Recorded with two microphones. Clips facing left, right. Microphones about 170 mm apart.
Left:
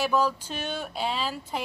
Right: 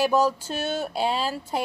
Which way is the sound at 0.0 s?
40° right (ahead or behind).